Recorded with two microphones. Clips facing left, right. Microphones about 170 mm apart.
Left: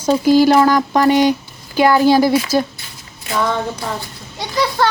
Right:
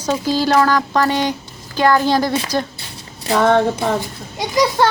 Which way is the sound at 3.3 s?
60° right (ahead or behind).